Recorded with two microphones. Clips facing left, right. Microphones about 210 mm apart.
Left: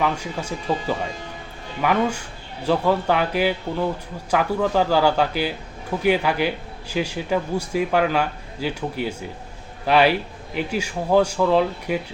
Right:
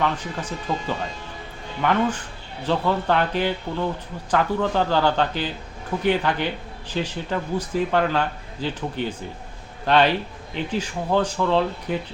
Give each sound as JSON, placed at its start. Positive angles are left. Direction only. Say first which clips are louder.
{"t": 0.0, "sound": "a man's voice", "louder": "left 1 dB", "side_deg": 10}